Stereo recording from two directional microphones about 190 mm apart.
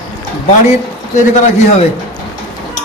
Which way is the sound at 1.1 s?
40° left (ahead or behind).